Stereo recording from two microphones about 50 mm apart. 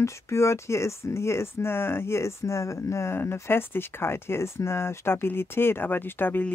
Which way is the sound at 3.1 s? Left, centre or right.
Left.